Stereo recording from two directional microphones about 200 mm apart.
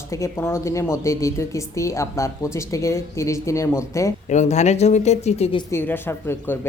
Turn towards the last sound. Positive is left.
turn(degrees=10)  # may be behind; listen again after turning